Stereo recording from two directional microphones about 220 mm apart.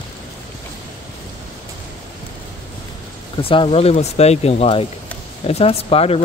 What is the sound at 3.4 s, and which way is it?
Speech, 25° left (ahead or behind).